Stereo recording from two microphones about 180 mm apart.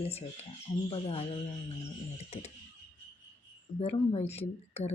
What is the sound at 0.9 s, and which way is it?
Speech, 35° left (ahead or behind).